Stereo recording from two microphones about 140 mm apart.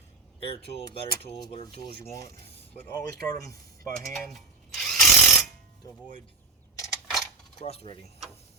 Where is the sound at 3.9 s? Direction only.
Centre (ahead or behind).